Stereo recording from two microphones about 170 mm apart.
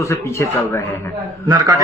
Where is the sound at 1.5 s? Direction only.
20° right (ahead or behind).